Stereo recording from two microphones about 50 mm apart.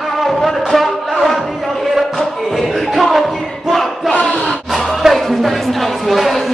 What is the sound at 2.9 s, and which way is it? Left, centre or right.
Music, centre.